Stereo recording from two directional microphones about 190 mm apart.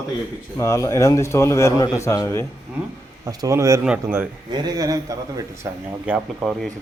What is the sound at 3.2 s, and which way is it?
Speech, 20° right (ahead or behind).